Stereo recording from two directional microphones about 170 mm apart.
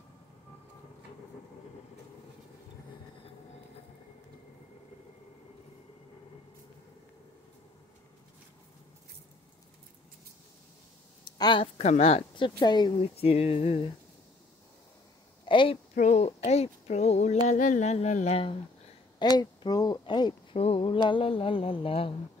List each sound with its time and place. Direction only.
11.2 s speech: 25° left (ahead or behind)
15.4 s a sound: 30° left (ahead or behind)
15.9 s speech: 45° left (ahead or behind)
19.3 s speech: 25° left (ahead or behind)